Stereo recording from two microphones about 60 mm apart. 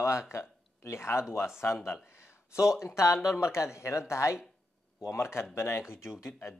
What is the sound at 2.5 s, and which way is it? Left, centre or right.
Speech, centre.